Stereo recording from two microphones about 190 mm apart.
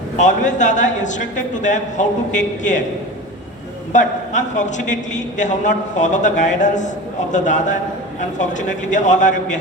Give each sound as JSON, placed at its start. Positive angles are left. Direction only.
{"t": 0.2, "sound": "a man's voice", "side_deg": 40}
{"t": 3.9, "sound": "a man's voice", "side_deg": 40}